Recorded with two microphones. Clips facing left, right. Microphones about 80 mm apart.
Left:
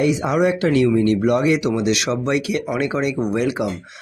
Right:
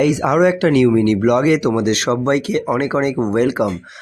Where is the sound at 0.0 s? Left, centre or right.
Right.